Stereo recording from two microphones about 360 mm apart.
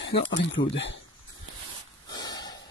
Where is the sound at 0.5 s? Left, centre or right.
Left.